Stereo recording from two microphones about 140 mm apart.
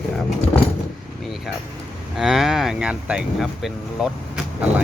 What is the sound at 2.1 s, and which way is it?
Speech, 5° right (ahead or behind).